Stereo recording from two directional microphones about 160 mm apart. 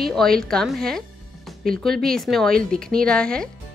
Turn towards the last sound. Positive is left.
turn(degrees=5)  # may be behind; listen again after turning